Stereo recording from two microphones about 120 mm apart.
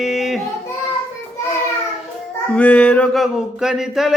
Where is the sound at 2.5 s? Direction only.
10° left (ahead or behind).